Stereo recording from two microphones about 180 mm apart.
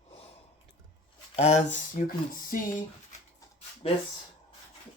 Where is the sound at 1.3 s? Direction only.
35° left (ahead or behind).